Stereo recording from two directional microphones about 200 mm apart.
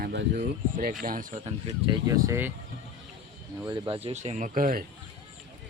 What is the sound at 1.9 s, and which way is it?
Speech, 15° right (ahead or behind).